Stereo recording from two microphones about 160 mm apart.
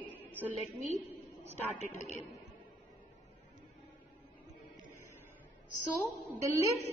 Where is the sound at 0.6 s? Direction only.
45° right (ahead or behind).